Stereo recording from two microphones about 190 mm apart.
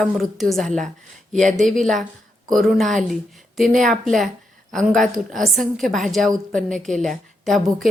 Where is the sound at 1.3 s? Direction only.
40° right (ahead or behind).